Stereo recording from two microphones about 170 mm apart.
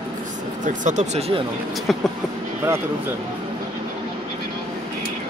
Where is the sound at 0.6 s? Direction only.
45° right (ahead or behind).